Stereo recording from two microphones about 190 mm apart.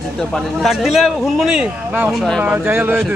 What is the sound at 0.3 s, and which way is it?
Speech, centre (ahead or behind).